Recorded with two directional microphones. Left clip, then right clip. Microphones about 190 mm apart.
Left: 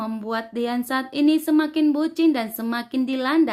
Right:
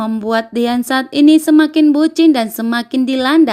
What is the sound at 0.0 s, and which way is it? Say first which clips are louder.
Speech: right 11 dB; 35° right (ahead or behind).